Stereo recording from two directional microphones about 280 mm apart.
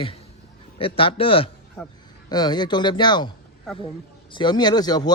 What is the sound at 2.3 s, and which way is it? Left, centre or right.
Speech, centre.